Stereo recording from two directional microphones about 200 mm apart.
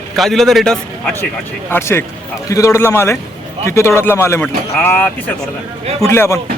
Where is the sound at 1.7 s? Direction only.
10° left (ahead or behind).